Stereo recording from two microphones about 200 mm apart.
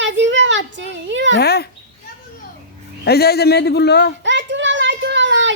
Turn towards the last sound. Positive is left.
turn(degrees=-65)  # may be behind; listen again after turning